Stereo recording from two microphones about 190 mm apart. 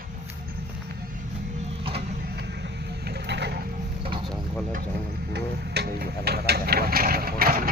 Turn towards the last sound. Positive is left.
turn(degrees=-50)  # may be behind; listen again after turning